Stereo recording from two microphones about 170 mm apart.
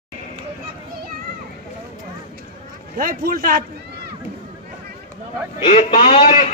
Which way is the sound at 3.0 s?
60° right (ahead or behind).